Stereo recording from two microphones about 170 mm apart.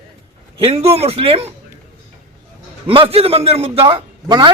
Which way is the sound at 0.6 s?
35° right (ahead or behind).